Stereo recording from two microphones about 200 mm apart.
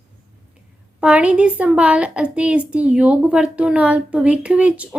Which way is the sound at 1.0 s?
5° right (ahead or behind).